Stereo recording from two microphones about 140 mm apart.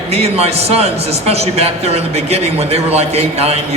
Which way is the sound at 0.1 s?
45° right (ahead or behind).